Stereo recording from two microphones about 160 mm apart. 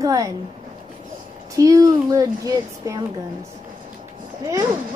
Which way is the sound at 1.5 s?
20° right (ahead or behind).